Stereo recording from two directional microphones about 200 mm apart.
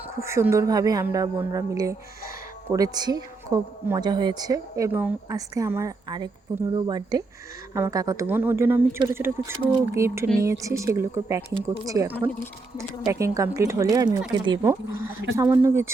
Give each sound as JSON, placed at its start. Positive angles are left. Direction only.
{"t": 0.2, "sound": "speech", "side_deg": -15}